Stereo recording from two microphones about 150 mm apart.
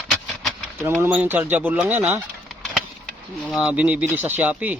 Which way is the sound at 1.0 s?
10° right (ahead or behind).